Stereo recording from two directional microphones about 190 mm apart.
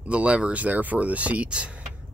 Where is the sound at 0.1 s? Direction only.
5° right (ahead or behind).